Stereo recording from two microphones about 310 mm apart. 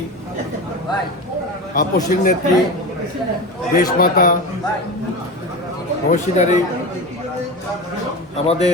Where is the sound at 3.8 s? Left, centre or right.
Left.